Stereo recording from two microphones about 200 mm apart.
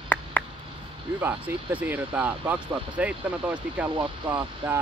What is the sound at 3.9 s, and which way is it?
Speech, 25° right (ahead or behind).